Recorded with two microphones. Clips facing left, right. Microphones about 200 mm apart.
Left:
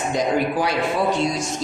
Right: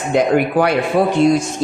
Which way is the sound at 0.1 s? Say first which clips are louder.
Right 8 dB; 60° right (ahead or behind).